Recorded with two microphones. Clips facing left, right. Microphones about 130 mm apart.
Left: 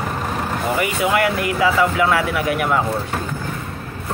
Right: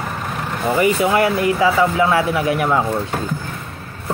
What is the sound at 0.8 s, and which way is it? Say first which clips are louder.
Speech: right 4 dB; 30° right (ahead or behind).